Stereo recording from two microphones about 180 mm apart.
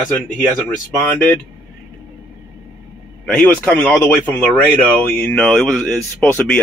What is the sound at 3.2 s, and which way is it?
Speech, 10° left (ahead or behind).